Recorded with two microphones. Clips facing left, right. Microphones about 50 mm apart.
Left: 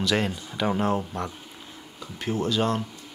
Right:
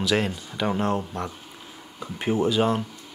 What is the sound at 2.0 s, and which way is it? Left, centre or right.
Speech, right.